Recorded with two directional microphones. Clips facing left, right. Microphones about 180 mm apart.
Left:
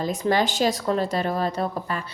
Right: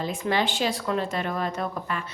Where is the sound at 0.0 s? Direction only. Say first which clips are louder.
Left 3 dB; 40° left (ahead or behind).